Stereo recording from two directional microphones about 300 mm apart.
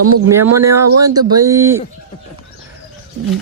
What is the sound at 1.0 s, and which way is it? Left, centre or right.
Speech, centre.